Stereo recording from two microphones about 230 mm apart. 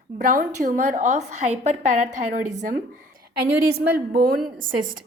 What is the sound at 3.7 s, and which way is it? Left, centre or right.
Speech, right.